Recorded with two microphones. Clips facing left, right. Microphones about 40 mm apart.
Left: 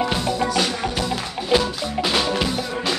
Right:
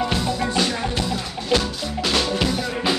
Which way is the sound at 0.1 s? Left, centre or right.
Centre.